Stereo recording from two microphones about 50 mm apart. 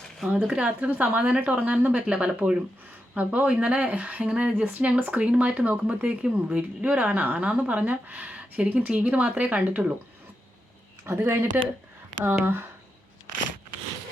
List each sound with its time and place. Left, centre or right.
0.3 s speech: right
1.5 s speech: right
4.6 s speech: right
6.6 s speech: right
11.0 s speech: right